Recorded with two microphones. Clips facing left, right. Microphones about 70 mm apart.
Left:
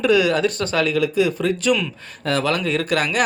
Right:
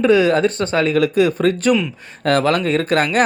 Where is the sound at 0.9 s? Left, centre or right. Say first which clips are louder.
Right 4 dB; right.